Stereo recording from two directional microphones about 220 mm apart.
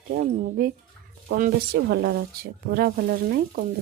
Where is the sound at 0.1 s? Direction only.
40° right (ahead or behind).